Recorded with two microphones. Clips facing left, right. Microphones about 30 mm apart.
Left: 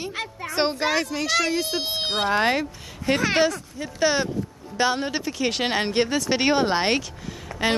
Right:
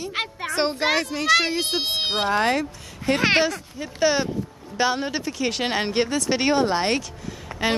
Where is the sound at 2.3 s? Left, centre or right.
Centre.